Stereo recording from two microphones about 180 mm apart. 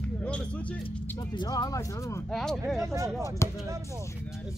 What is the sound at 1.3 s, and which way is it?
Speech, 20° left (ahead or behind).